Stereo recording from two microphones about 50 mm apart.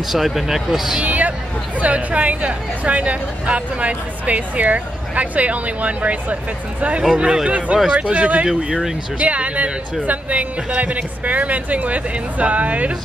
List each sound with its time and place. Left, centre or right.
0.1 s speech: centre
1.0 s hubbub: right
1.8 s speech: right
7.4 s speech: right
7.7 s speech: centre
8.0 s speech: right